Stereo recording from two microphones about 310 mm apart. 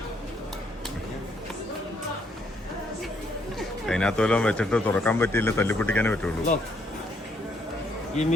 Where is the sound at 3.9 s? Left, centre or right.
Centre.